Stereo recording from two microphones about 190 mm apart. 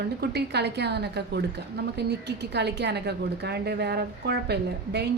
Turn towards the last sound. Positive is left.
turn(degrees=-60)  # may be behind; listen again after turning